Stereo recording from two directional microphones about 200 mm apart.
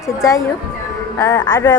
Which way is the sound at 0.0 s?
15° left (ahead or behind).